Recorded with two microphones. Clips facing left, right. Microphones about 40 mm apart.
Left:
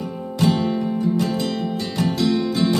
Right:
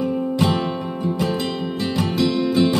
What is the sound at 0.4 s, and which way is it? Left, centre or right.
Music, right.